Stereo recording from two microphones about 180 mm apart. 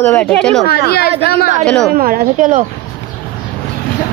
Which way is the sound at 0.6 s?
60° left (ahead or behind).